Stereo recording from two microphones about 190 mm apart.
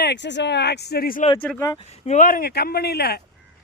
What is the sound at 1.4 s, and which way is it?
Speech, 5° left (ahead or behind).